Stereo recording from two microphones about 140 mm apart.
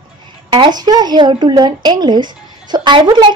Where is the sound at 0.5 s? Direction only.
30° right (ahead or behind).